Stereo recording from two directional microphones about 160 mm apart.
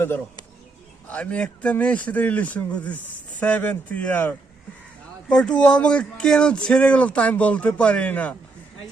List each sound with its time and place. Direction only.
1.1 s speech: 10° left (ahead or behind)